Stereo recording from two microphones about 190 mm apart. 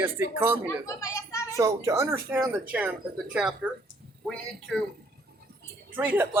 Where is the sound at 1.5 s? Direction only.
15° right (ahead or behind); by 4.8 s centre (ahead or behind).